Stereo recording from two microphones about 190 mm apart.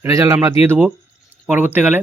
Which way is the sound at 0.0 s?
15° right (ahead or behind).